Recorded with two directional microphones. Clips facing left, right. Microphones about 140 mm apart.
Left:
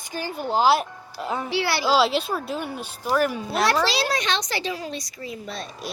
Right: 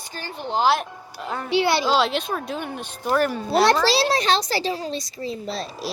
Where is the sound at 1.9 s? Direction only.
5° left (ahead or behind).